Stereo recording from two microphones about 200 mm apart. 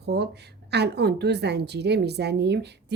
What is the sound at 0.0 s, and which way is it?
A woman's voice, 55° right (ahead or behind).